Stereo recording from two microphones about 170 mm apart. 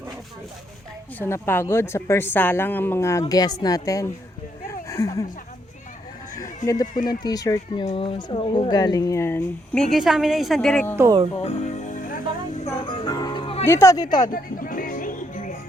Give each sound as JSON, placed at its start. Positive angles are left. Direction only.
{"t": 1.2, "sound": "a woman's voice", "side_deg": 15}
{"t": 6.6, "sound": "speech", "side_deg": 45}
{"t": 7.3, "sound": "speech", "side_deg": 20}
{"t": 7.9, "sound": "speech", "side_deg": 30}
{"t": 9.9, "sound": "a woman's voice", "side_deg": 0}
{"t": 10.9, "sound": "speech", "side_deg": -15}
{"t": 11.3, "sound": "music", "side_deg": 40}
{"t": 13.7, "sound": "speech", "side_deg": 15}
{"t": 14.3, "sound": "music", "side_deg": 55}